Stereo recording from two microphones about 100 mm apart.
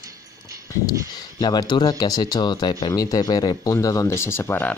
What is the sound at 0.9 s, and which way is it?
Speech, 45° left (ahead or behind).